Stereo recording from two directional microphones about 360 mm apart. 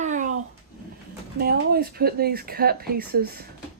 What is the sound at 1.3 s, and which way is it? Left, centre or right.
Speech, right.